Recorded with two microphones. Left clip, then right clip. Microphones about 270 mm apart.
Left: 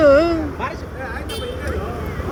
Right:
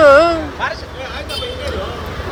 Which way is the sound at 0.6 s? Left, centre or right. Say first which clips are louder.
Right 5 dB; left.